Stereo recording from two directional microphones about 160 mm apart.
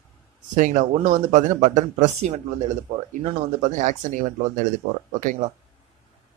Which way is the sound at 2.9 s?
40° right (ahead or behind).